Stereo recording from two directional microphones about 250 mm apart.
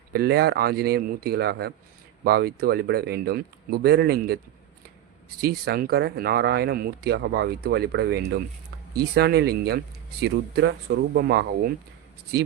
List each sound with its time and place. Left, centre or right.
0.1 s speech: right
5.4 s speech: right